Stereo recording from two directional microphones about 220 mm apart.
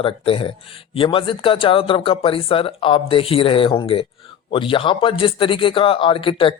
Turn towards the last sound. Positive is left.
turn(degrees=25)  # may be behind; listen again after turning